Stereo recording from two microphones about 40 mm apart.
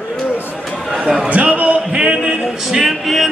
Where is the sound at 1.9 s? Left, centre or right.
Centre.